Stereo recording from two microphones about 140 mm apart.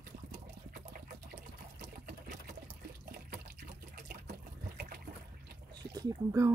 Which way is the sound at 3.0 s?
90° right.